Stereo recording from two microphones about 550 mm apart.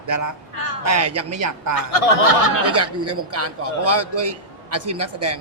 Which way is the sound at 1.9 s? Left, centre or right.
Left.